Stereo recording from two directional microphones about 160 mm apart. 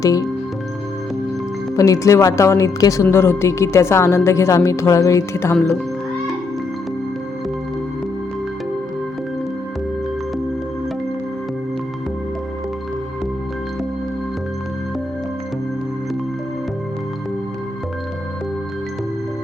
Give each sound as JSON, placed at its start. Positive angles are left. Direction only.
{"t": 0.0, "sound": "speech", "side_deg": 20}
{"t": 1.7, "sound": "speech", "side_deg": 20}